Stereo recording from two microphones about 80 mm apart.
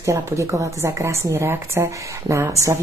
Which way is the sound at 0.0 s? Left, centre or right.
Right.